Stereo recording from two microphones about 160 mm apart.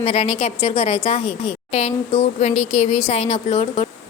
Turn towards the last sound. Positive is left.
turn(degrees=35)  # may be behind; listen again after turning